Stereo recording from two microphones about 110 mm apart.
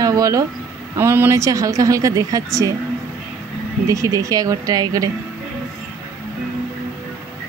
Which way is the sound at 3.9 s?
30° right (ahead or behind).